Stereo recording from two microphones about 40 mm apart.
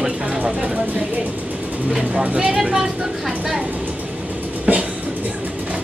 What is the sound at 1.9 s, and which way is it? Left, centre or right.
Speech, centre.